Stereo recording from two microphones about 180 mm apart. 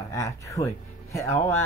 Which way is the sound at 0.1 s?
15° left (ahead or behind).